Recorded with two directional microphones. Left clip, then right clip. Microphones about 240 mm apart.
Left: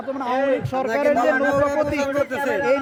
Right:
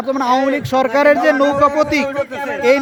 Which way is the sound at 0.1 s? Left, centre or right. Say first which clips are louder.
Right 6 dB; right.